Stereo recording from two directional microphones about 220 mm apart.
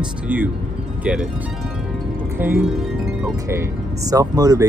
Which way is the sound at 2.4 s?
10° right (ahead or behind).